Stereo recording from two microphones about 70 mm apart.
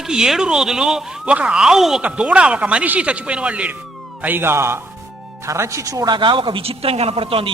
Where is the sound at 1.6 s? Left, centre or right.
Centre.